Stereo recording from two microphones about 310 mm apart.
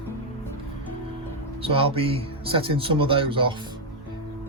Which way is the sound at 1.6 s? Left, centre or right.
Centre.